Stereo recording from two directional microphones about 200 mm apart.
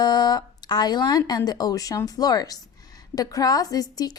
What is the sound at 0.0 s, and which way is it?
A woman's voice, 20° left (ahead or behind).